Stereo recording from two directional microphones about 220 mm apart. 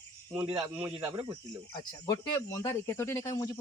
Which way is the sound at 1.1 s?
25° right (ahead or behind).